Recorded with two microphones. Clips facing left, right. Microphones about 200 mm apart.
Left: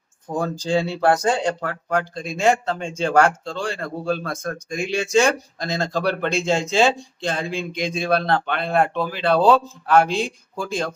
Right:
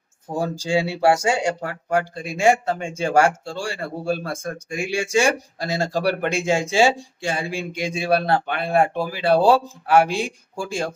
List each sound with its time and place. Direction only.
0.3 s a man's voice: 10° right (ahead or behind)